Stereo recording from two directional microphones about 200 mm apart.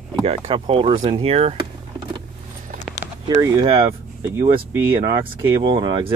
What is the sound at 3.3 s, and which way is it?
Speech, 25° right (ahead or behind).